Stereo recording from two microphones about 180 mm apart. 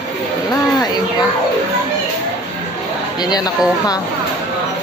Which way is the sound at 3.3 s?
20° left (ahead or behind).